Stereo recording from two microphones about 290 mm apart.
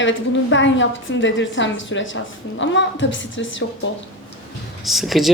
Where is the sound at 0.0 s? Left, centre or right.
Left.